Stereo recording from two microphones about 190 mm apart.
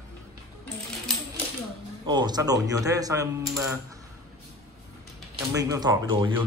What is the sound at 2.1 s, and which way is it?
A man's voice, 20° right (ahead or behind).